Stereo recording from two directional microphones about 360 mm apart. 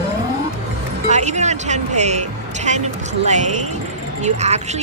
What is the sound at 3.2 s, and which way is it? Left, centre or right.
Speech, centre.